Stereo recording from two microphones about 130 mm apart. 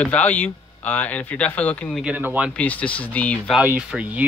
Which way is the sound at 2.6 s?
10° left (ahead or behind).